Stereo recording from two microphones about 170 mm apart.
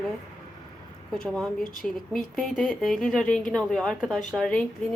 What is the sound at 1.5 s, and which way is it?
Speech, 55° left (ahead or behind).